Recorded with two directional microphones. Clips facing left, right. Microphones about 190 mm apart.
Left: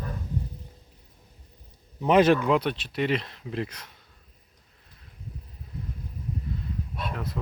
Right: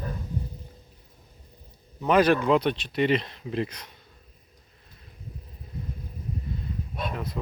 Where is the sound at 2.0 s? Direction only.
25° left (ahead or behind).